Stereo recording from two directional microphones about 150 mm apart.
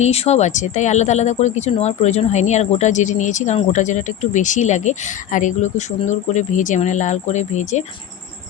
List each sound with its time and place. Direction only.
0.0 s speech: 45° left (ahead or behind)